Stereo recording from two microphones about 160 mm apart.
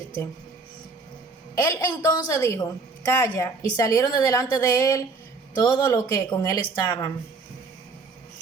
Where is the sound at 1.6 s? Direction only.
20° left (ahead or behind).